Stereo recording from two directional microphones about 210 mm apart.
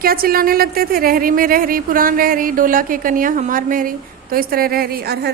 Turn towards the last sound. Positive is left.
turn(degrees=-50)  # may be behind; listen again after turning